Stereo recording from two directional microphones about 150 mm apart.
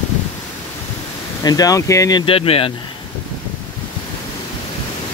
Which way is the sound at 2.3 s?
40° left (ahead or behind).